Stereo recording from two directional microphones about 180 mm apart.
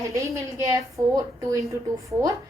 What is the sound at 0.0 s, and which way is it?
A woman's voice, 15° right (ahead or behind).